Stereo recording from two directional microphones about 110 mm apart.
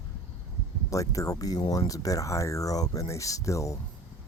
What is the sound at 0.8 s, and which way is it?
Speech, 30° left (ahead or behind).